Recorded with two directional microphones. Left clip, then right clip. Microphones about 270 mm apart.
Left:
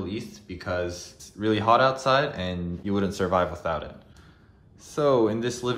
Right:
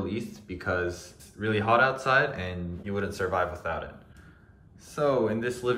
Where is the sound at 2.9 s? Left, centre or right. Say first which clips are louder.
Left 4 dB; left.